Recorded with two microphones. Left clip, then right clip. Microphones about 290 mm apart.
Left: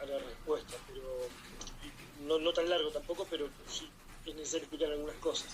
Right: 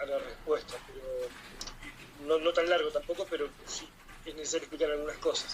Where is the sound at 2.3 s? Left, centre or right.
Right.